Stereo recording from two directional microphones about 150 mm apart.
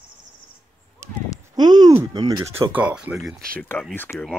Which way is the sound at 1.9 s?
20° right (ahead or behind).